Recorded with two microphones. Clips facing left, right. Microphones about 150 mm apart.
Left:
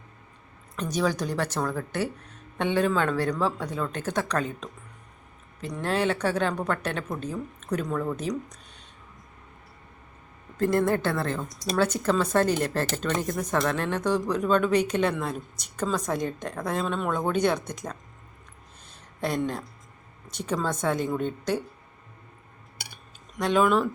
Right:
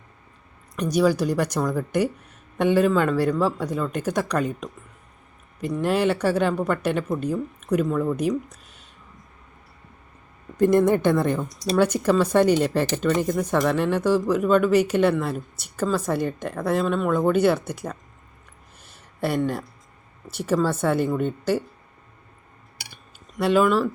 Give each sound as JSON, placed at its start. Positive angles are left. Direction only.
{"t": 0.8, "sound": "speech", "side_deg": -10}
{"t": 10.6, "sound": "a woman's voice", "side_deg": -20}
{"t": 18.9, "sound": "a sound", "side_deg": -10}
{"t": 20.2, "sound": "speech", "side_deg": -5}
{"t": 23.4, "sound": "a woman's voice", "side_deg": -5}